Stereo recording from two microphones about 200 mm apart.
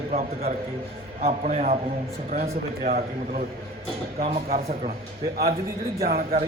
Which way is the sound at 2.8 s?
45° right (ahead or behind).